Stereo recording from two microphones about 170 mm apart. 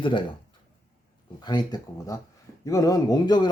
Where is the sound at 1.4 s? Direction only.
25° left (ahead or behind).